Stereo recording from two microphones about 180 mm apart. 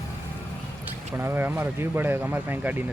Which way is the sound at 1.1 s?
10° right (ahead or behind).